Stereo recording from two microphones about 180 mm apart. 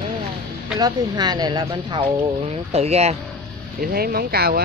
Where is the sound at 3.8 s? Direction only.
55° right (ahead or behind).